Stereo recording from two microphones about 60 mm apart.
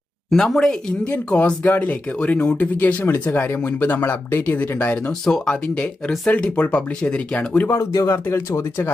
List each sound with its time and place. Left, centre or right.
0.3 s speech: centre
1.0 s speech: left
5.2 s speech: centre
8.1 s speech: left